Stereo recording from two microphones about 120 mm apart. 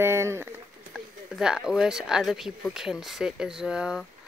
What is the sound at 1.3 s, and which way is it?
Speech, 5° right (ahead or behind).